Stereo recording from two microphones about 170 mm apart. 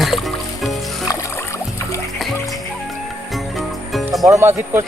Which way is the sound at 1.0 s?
20° left (ahead or behind).